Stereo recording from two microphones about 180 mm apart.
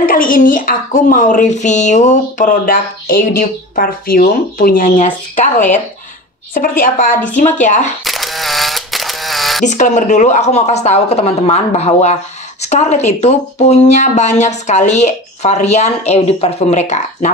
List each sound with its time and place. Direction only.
0.0 s speech: 50° left (ahead or behind)
6.8 s speech: 50° left (ahead or behind)
8.0 s camera: centre (ahead or behind)
9.7 s speech: 40° left (ahead or behind)